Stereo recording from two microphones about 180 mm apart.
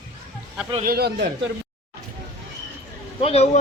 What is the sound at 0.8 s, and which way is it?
Speech, 60° right (ahead or behind).